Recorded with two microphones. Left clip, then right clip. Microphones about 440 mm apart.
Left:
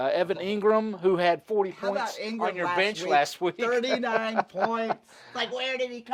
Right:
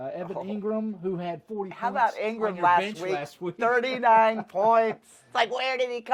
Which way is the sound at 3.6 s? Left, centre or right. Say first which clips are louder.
Right 4 dB; right.